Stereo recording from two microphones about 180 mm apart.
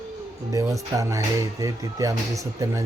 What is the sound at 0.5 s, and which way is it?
Speech, 20° right (ahead or behind).